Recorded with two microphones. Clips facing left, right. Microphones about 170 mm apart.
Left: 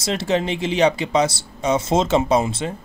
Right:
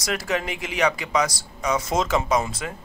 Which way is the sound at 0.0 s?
25° left (ahead or behind).